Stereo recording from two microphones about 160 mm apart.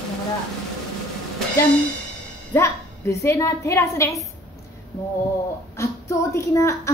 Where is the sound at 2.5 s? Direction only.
15° left (ahead or behind).